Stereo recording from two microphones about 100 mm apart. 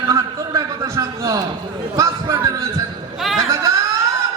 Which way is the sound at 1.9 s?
30° right (ahead or behind).